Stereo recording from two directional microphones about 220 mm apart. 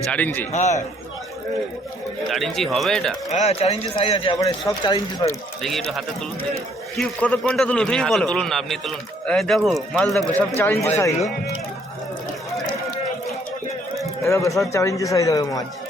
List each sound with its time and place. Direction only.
0.1 s a man's voice: 10° left (ahead or behind)
0.5 s a man's voice: 30° left (ahead or behind)
2.3 s a man's voice: centre (ahead or behind)
3.3 s speech: 30° left (ahead or behind)
5.6 s a man's voice: centre (ahead or behind)
12.5 s run: centre (ahead or behind)
14.2 s a man's voice: 15° left (ahead or behind)